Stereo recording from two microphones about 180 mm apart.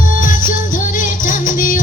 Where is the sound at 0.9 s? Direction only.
50° left (ahead or behind).